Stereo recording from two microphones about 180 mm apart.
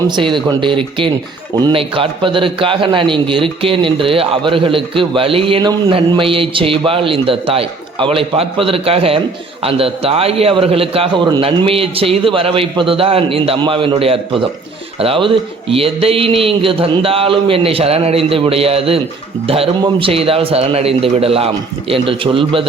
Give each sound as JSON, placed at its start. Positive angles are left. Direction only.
{"t": 0.2, "sound": "a man's voice", "side_deg": -25}